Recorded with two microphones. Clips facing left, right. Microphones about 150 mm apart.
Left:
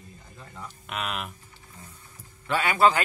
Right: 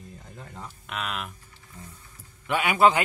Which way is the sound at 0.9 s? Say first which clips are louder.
Left 1 dB; 5° left (ahead or behind).